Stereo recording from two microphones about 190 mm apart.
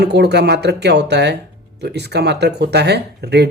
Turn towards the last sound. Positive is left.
turn(degrees=-60)  # may be behind; listen again after turning